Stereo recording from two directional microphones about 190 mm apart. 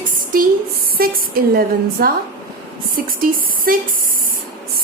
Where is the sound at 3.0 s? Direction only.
50° right (ahead or behind).